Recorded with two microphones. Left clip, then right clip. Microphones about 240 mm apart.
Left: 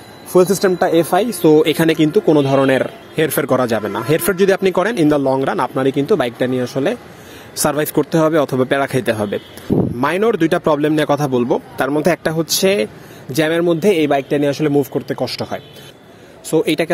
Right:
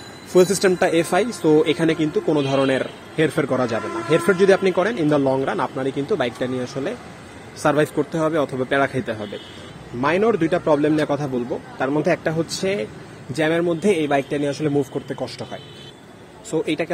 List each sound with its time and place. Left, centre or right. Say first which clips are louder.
0.3 s a man's voice: left 3 dB; centre; by 16.9 s left